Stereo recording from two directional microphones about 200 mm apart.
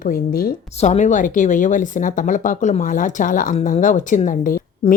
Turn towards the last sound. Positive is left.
turn(degrees=45)  # may be behind; listen again after turning